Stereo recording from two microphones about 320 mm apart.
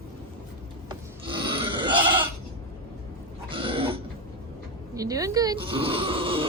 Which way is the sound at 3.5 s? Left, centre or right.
Centre.